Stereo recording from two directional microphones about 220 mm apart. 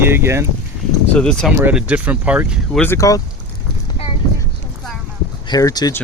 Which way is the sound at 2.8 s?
10° left (ahead or behind).